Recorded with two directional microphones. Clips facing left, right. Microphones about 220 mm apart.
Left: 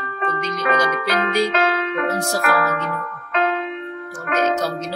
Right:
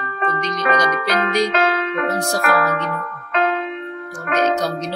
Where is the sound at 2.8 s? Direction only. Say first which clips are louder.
Right 1 dB; 45° right (ahead or behind).